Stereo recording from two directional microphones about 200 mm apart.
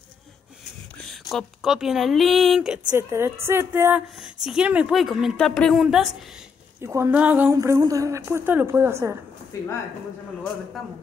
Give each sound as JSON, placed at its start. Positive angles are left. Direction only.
{"t": 0.9, "sound": "a woman's voice", "side_deg": 0}
{"t": 6.8, "sound": "a woman's voice", "side_deg": -10}
{"t": 9.5, "sound": "speech", "side_deg": 15}